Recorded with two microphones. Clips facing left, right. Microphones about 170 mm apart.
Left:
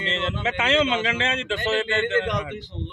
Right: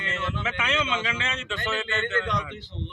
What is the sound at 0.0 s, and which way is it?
Speech, 25° left (ahead or behind).